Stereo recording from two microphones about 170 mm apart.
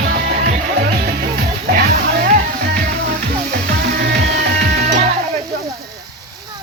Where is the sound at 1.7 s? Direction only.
65° right (ahead or behind).